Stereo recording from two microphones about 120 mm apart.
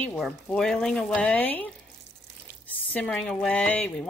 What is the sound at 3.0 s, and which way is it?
Speech, 5° left (ahead or behind).